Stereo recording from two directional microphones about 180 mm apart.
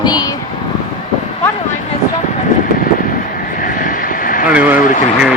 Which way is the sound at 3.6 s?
50° left (ahead or behind).